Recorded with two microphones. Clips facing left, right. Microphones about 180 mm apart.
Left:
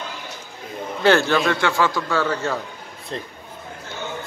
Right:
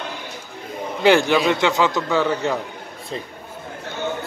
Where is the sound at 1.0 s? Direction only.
15° right (ahead or behind).